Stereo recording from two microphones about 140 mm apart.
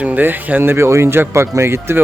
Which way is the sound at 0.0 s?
10° right (ahead or behind).